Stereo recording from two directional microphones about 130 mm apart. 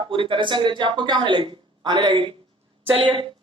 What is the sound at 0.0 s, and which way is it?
A woman's voice, 40° right (ahead or behind).